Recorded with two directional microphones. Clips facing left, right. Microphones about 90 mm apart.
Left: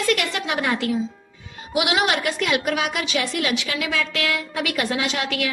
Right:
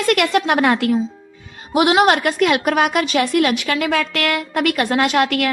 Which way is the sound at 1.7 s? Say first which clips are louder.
Right 7 dB; 40° right (ahead or behind).